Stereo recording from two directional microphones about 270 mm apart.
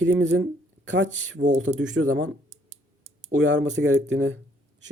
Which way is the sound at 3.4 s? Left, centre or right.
Right.